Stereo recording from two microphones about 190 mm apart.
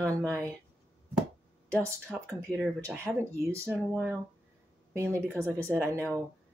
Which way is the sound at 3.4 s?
15° right (ahead or behind).